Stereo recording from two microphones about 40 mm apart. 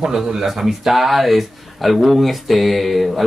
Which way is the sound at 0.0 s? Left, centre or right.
Centre.